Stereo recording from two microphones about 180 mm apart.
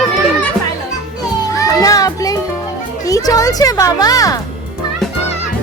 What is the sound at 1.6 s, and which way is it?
Children playing, 20° left (ahead or behind).